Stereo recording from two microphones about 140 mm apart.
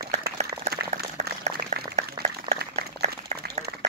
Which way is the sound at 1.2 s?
55° right (ahead or behind).